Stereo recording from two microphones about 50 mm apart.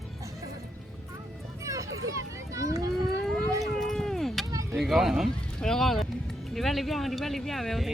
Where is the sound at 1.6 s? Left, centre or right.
Right.